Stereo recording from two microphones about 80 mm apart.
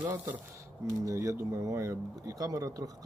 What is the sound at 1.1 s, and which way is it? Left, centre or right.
Speech, right.